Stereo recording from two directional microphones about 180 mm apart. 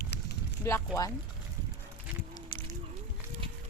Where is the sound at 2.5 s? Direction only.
30° left (ahead or behind).